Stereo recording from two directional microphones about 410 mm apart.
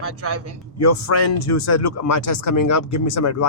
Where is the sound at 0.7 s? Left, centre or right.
Left.